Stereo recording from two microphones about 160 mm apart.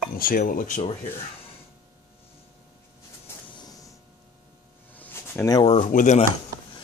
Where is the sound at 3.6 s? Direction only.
25° left (ahead or behind).